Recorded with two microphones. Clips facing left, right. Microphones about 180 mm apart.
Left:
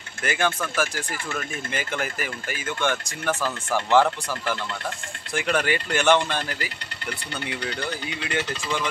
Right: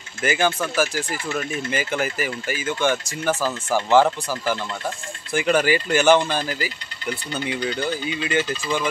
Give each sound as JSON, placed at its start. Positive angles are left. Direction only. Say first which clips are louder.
{"t": 0.2, "sound": "speech", "louder": "right 4 dB", "side_deg": -5}
{"t": 8.4, "sound": "speech", "louder": "right 4 dB", "side_deg": 65}